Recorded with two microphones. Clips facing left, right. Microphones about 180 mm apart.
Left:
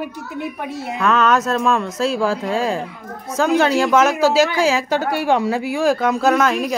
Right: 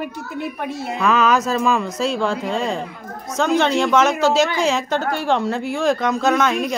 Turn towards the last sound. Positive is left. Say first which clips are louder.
# left 2 dB
turn(degrees=5)  # may be behind; listen again after turning